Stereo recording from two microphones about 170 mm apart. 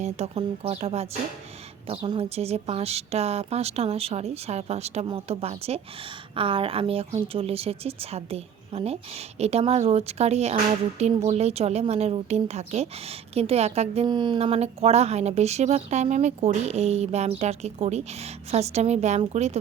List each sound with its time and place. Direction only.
0.0 s a woman's voice: 40° right (ahead or behind)
14.1 s a woman's voice: 25° right (ahead or behind)